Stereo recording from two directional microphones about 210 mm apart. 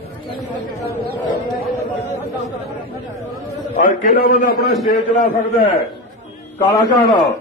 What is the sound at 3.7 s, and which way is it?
A man's voice, 40° left (ahead or behind).